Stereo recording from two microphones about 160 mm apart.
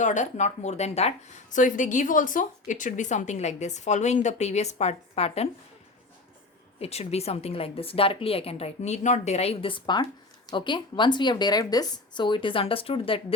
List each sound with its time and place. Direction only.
0.0 s speech: 50° left (ahead or behind)
6.7 s a woman's voice: 40° left (ahead or behind)